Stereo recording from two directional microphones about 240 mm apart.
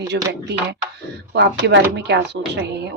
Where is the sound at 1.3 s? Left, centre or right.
Right.